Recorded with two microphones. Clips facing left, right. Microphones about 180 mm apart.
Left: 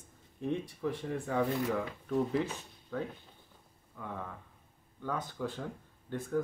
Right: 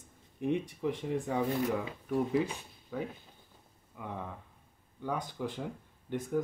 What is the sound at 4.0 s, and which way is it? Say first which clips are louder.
Speech: right 1 dB; 15° right (ahead or behind).